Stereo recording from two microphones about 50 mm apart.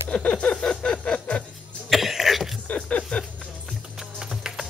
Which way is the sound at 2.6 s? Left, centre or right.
Left.